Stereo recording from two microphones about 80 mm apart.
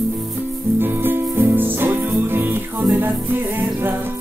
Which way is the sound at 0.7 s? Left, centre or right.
Right.